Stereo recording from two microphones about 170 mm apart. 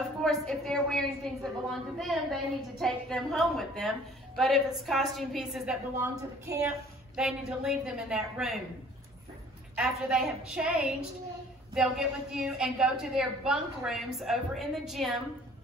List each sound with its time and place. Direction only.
0.2 s a woman's voice: centre (ahead or behind)
5.9 s a woman's voice: 20° right (ahead or behind)
7.2 s a woman's voice: 5° right (ahead or behind)
9.8 s a woman's voice: 5° right (ahead or behind)